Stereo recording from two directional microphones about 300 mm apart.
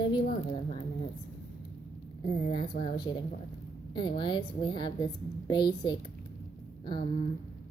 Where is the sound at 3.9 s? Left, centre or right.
Centre.